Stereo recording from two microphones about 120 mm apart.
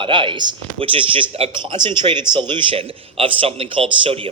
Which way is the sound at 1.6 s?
40° right (ahead or behind).